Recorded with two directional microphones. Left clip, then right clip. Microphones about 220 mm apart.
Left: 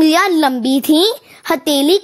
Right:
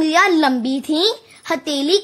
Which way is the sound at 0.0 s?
40° left (ahead or behind).